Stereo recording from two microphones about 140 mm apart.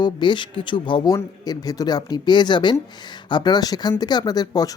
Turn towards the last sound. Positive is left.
turn(degrees=30)  # may be behind; listen again after turning